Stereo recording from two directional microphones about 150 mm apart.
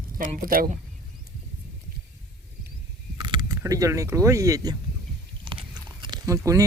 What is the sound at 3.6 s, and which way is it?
Speech, 20° right (ahead or behind).